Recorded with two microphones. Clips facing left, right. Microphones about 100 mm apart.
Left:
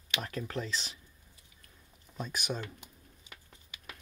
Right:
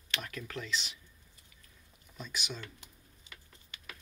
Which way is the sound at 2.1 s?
40° left (ahead or behind).